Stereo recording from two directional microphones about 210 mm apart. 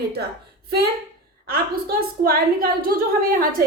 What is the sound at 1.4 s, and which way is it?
A woman's voice, 45° right (ahead or behind).